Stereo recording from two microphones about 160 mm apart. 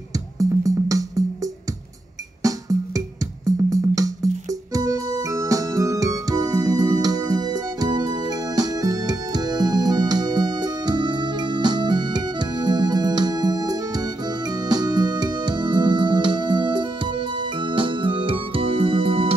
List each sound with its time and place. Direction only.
0.1 s music: 20° right (ahead or behind); by 19.3 s 35° right (ahead or behind)